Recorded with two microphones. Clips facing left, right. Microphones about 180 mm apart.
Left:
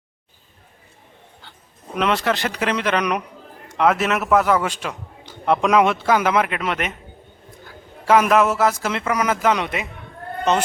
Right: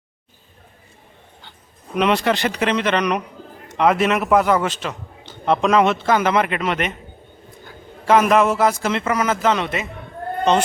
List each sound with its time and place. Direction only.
2.0 s a man's voice: centre (ahead or behind)
4.7 s a man's voice: 10° left (ahead or behind)
8.0 s a man's voice: 5° left (ahead or behind)